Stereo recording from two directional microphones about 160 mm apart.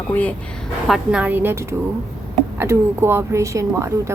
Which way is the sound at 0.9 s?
5° right (ahead or behind).